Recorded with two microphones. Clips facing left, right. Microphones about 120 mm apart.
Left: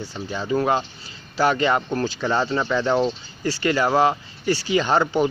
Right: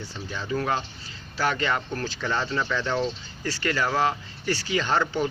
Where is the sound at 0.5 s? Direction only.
25° left (ahead or behind).